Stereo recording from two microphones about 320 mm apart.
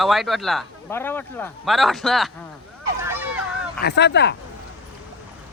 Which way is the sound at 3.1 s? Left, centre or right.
Centre.